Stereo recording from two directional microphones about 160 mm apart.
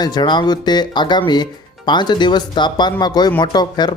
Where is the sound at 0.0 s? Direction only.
25° left (ahead or behind).